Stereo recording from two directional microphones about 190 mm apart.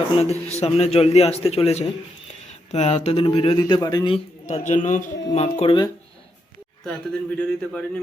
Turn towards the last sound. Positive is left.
turn(degrees=5)  # may be behind; listen again after turning